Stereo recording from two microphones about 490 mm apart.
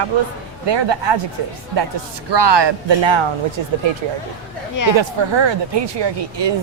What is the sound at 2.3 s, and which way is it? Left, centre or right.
Speech, right.